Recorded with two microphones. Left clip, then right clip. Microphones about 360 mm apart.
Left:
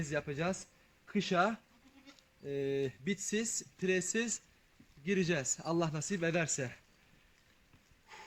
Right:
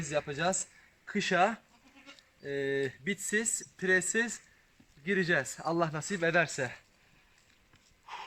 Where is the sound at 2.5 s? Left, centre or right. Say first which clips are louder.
Right 3 dB; right.